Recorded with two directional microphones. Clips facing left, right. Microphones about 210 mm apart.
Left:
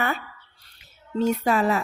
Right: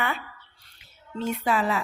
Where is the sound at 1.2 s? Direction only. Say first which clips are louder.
Left 4 dB; 45° left (ahead or behind).